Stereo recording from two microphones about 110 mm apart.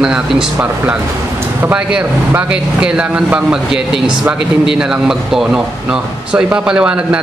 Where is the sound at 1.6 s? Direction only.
10° right (ahead or behind).